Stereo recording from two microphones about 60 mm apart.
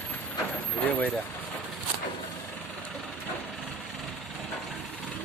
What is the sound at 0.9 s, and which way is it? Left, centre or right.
Vehicle, left.